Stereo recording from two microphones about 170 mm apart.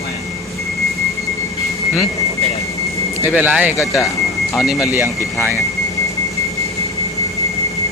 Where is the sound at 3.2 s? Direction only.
10° right (ahead or behind).